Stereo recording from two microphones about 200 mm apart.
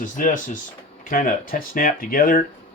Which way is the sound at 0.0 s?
40° left (ahead or behind).